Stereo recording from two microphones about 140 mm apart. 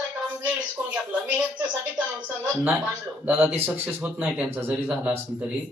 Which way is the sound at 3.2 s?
10° right (ahead or behind).